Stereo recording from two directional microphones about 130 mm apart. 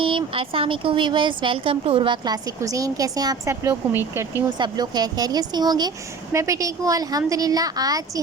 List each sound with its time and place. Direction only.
0.0 s speech: 40° right (ahead or behind)
2.2 s a woman's voice: 30° right (ahead or behind)
4.5 s a woman's voice: 35° right (ahead or behind)